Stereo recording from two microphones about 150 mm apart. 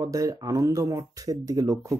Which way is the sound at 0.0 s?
20° right (ahead or behind).